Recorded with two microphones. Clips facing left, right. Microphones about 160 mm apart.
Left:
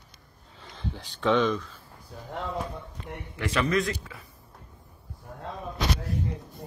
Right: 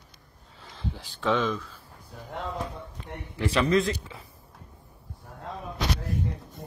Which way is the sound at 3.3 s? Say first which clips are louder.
Right 3 dB; 30° right (ahead or behind).